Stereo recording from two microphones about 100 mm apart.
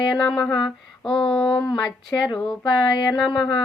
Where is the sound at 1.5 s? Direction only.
45° left (ahead or behind).